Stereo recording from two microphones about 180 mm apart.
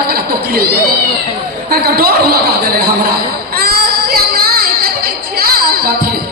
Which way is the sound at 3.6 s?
55° right (ahead or behind).